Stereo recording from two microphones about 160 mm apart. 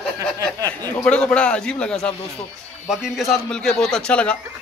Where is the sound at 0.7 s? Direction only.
10° left (ahead or behind).